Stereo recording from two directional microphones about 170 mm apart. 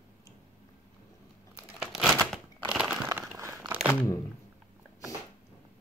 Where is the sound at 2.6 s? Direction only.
5° right (ahead or behind).